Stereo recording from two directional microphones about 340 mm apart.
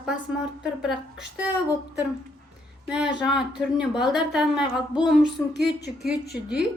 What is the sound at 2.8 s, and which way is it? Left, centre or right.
A woman's voice, centre.